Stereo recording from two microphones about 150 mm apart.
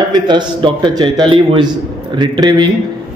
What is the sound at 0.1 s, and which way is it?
A man's voice, 30° right (ahead or behind).